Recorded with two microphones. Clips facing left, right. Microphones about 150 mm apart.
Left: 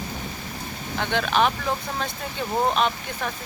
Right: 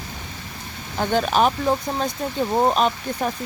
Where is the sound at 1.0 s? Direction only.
40° right (ahead or behind).